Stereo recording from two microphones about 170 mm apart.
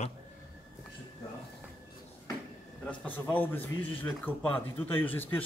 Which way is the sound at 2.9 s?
10° left (ahead or behind).